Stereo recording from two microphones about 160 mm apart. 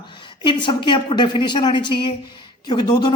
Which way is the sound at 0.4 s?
30° left (ahead or behind).